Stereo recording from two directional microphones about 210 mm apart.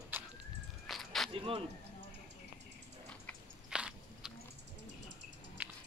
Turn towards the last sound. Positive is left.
turn(degrees=-5)  # may be behind; listen again after turning